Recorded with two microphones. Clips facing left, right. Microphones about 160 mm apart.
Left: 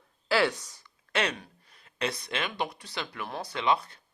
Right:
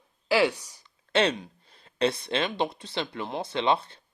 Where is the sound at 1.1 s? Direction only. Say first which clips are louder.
Right 6 dB; 25° right (ahead or behind).